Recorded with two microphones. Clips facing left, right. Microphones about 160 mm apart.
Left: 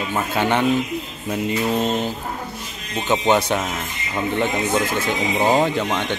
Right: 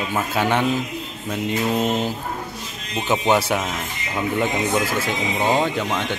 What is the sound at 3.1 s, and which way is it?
Speech, 5° right (ahead or behind).